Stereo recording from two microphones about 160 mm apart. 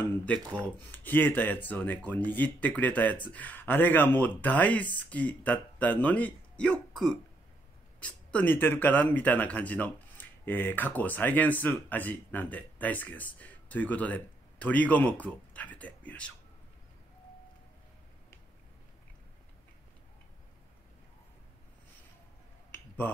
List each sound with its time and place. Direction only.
0.0 s speech: 10° left (ahead or behind)
22.7 s finger snapping: 15° left (ahead or behind)